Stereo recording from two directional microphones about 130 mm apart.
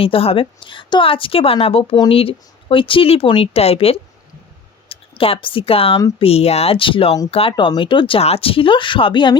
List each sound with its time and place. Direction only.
0.0 s speech: 45° left (ahead or behind)